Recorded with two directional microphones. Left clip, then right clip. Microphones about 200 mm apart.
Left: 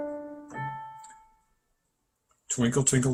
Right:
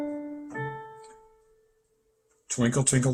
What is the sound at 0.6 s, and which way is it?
Keyboard, 45° left (ahead or behind).